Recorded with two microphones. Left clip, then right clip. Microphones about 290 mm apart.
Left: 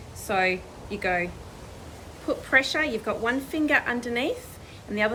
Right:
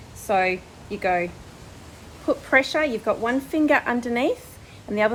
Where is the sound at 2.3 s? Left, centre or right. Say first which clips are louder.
Right 3 dB; centre.